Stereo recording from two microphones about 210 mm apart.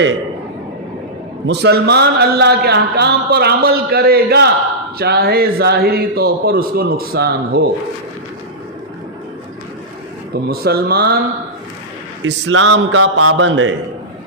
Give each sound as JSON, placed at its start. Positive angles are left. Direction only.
{"t": 1.5, "sound": "a man's voice", "side_deg": -55}
{"t": 10.5, "sound": "a man's voice", "side_deg": -45}
{"t": 12.2, "sound": "a man's voice", "side_deg": -65}